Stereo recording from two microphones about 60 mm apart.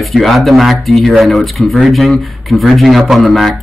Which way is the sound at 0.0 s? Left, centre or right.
Centre.